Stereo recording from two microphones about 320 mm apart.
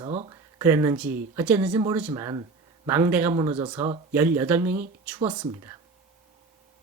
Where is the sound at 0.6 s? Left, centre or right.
Centre.